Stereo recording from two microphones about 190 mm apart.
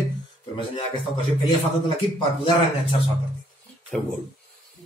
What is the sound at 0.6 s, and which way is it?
Speech, 25° left (ahead or behind).